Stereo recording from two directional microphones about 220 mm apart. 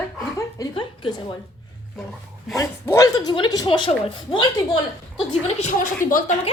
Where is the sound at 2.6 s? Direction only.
15° left (ahead or behind).